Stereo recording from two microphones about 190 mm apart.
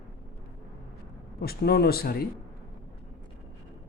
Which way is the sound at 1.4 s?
55° left (ahead or behind).